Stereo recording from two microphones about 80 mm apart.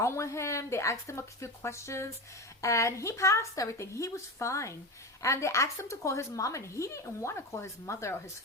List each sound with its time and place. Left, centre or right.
0.0 s a woman's voice: left